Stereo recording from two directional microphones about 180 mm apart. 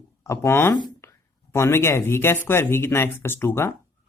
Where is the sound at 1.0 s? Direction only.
15° left (ahead or behind).